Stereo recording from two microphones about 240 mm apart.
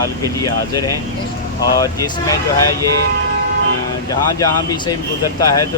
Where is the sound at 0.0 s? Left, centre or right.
Centre.